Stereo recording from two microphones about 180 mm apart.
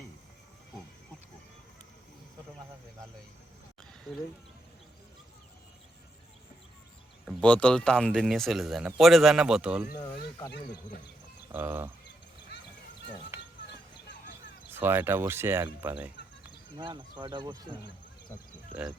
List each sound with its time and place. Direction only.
7.4 s speech: 5° left (ahead or behind)
11.5 s speech: 10° right (ahead or behind)
12.5 s a sound: 70° left (ahead or behind)
14.7 s speech: 10° right (ahead or behind)
16.7 s speech: 25° right (ahead or behind)